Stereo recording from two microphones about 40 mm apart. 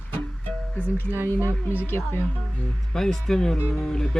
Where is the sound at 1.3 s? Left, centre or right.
Left.